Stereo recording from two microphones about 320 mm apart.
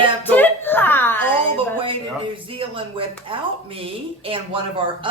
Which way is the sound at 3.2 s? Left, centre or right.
Centre.